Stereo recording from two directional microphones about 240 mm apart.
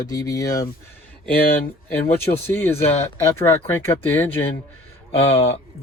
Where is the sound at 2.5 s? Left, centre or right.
Centre.